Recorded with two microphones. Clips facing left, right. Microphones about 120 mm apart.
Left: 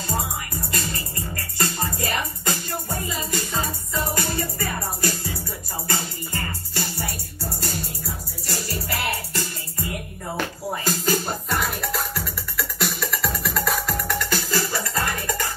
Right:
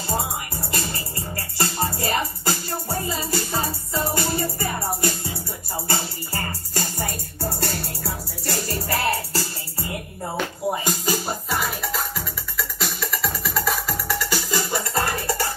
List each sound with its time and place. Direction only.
0.6 s music: 25° right (ahead or behind); by 8.7 s 60° right (ahead or behind)
8.8 s music: 35° right (ahead or behind)
11.1 s music: 5° right (ahead or behind)
14.5 s music: 25° right (ahead or behind)